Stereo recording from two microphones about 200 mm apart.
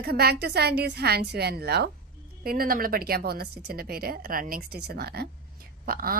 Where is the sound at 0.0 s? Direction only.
50° right (ahead or behind).